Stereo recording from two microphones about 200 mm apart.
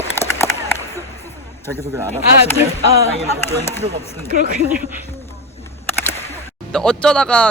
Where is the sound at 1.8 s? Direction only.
15° right (ahead or behind).